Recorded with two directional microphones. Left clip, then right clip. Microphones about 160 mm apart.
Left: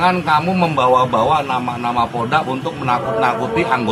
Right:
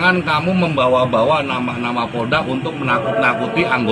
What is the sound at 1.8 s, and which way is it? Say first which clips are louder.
Speech: left 3 dB; 15° left (ahead or behind).